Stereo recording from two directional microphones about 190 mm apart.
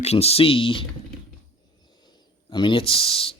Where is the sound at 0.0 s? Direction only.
35° left (ahead or behind).